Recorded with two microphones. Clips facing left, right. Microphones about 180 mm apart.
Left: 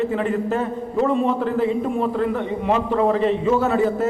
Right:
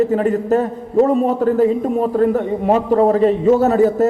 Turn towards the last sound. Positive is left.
turn(degrees=-40)  # may be behind; listen again after turning